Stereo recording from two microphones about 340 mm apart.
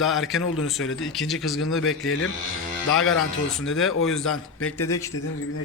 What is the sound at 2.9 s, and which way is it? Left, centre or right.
Speech, left.